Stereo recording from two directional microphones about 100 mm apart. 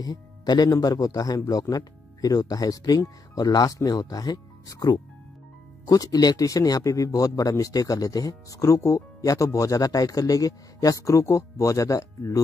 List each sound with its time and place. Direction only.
0.0 s speech: 45° left (ahead or behind)